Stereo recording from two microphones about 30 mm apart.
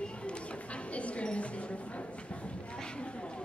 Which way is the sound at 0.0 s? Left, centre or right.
Left.